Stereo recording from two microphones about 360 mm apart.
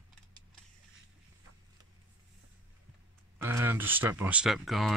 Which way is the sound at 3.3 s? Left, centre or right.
Centre.